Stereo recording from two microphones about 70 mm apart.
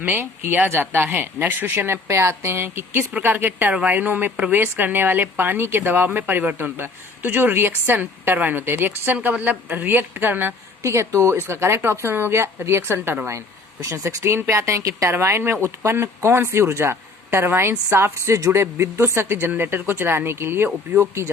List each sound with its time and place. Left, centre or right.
0.0 s speech: right
10.8 s speech: right
15.1 s speech: right